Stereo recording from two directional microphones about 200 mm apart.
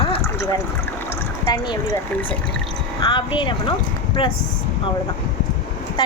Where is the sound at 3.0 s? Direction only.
25° left (ahead or behind).